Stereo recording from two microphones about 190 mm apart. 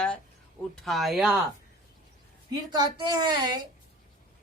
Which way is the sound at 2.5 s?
20° right (ahead or behind).